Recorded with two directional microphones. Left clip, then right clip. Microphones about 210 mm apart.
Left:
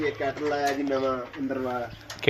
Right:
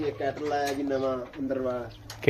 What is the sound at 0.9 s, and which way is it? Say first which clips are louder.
Speech: left 2 dB; 15° left (ahead or behind).